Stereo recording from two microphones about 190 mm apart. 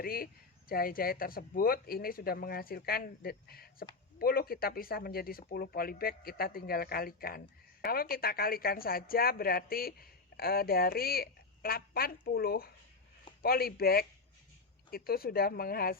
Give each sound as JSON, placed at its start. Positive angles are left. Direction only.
{"t": 0.0, "sound": "speech", "side_deg": 50}